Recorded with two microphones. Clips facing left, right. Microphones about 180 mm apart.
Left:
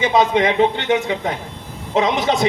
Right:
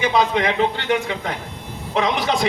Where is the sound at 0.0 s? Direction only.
20° left (ahead or behind).